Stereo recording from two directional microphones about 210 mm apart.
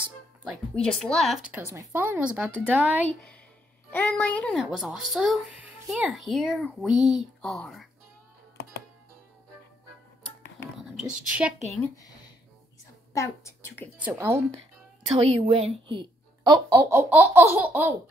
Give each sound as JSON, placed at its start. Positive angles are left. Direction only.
{"t": 0.5, "sound": "a woman's voice", "side_deg": 0}
{"t": 3.9, "sound": "speech", "side_deg": 5}
{"t": 10.8, "sound": "speech", "side_deg": -5}
{"t": 13.1, "sound": "a woman's voice", "side_deg": 15}
{"t": 13.9, "sound": "a woman's voice", "side_deg": -10}
{"t": 15.1, "sound": "a woman's voice", "side_deg": -30}
{"t": 15.9, "sound": "a sound", "side_deg": -25}
{"t": 16.7, "sound": "a woman's voice", "side_deg": -10}